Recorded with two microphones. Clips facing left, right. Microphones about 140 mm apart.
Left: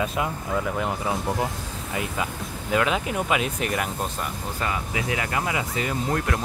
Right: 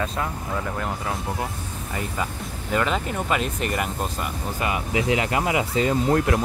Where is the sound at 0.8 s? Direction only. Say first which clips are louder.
Left 2 dB; 15° left (ahead or behind).